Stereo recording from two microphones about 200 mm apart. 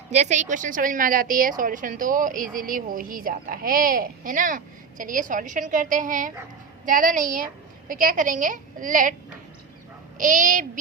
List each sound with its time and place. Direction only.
0.1 s a woman's voice: 35° right (ahead or behind)